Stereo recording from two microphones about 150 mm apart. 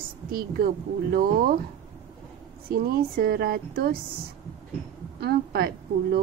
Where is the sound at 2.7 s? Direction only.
90° right.